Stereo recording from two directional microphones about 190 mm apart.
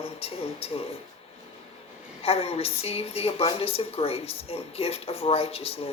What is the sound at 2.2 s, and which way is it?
A woman's voice, 30° left (ahead or behind).